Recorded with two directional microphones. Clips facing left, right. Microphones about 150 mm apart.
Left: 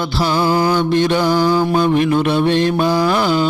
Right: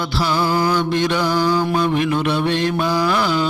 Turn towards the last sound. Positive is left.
turn(degrees=30)  # may be behind; listen again after turning